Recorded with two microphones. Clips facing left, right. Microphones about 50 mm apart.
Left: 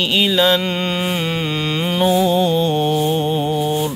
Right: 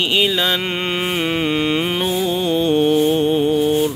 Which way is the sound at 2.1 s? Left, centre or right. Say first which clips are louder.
Left 3 dB; centre.